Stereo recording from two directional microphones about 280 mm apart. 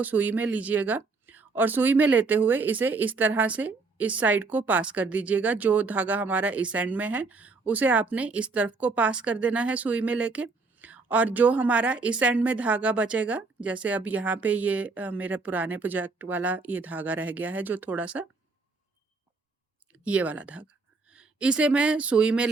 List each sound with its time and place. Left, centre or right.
0.0 s speech: centre
19.9 s speech: centre